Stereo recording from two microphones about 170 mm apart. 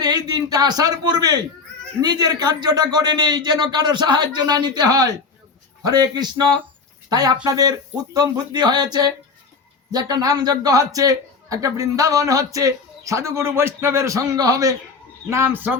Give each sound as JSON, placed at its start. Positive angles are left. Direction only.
{"t": 0.0, "sound": "a man's voice", "side_deg": -25}